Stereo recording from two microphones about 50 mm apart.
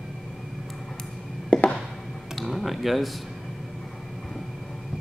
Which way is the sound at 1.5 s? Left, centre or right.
Left.